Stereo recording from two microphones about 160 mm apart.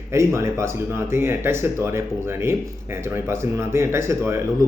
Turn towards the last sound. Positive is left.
turn(degrees=-15)  # may be behind; listen again after turning